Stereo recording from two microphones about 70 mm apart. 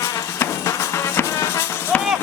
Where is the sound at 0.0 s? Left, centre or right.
Left.